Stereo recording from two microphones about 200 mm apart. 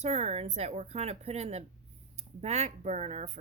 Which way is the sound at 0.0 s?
35° right (ahead or behind).